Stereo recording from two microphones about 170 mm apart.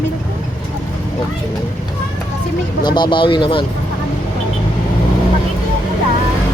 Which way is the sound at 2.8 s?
25° left (ahead or behind).